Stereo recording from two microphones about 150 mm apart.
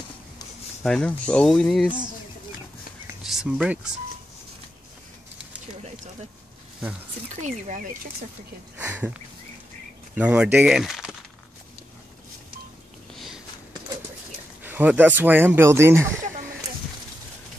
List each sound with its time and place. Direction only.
0.8 s speech: 5° left (ahead or behind)
3.3 s speech: 5° right (ahead or behind)
7.4 s speech: 55° right (ahead or behind)
8.7 s speech: 10° right (ahead or behind)
14.6 s speech: 10° right (ahead or behind)